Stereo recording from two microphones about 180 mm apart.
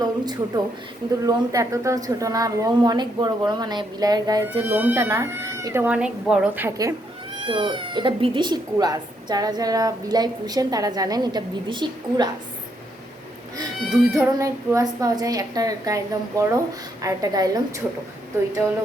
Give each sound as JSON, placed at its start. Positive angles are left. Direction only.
{"t": 0.0, "sound": "speech", "side_deg": -20}
{"t": 4.4, "sound": "speech", "side_deg": -10}
{"t": 7.4, "sound": "speech", "side_deg": -25}
{"t": 14.1, "sound": "speech", "side_deg": -15}
{"t": 17.0, "sound": "speech", "side_deg": -20}